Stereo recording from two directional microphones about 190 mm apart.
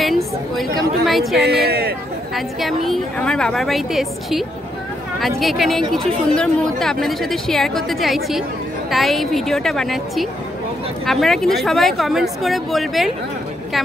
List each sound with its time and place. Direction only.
0.0 s speech: centre (ahead or behind)
1.4 s speech: 55° right (ahead or behind)
2.3 s speech: centre (ahead or behind)